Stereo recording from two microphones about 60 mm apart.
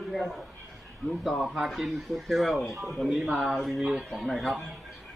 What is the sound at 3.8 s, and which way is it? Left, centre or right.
Speech, centre.